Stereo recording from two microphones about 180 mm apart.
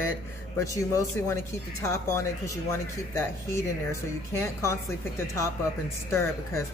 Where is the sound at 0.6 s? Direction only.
15° left (ahead or behind).